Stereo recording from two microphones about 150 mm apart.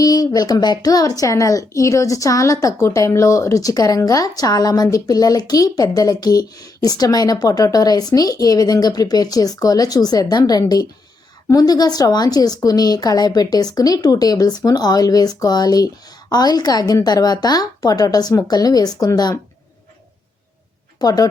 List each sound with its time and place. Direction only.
0.0 s a woman's voice: 25° left (ahead or behind)
21.0 s a woman's voice: 25° left (ahead or behind)